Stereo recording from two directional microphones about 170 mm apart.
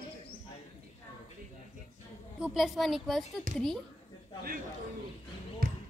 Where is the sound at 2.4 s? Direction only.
Centre (ahead or behind).